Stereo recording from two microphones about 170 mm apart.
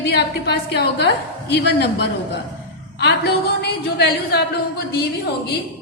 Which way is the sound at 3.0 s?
75° left (ahead or behind).